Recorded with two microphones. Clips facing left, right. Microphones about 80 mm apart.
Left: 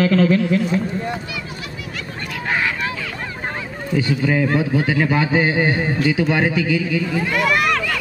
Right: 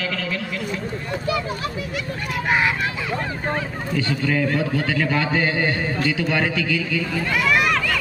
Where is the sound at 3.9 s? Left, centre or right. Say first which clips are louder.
Left 4 dB; centre.